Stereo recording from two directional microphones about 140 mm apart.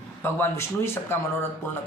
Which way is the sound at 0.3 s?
20° left (ahead or behind).